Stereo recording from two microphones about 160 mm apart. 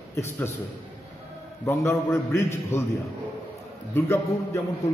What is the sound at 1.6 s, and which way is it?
A man's voice, 15° left (ahead or behind).